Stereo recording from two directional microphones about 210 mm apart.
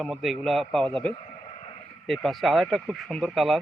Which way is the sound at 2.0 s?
Centre (ahead or behind).